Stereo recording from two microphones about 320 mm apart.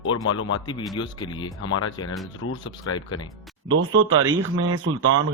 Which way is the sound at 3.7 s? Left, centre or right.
Right.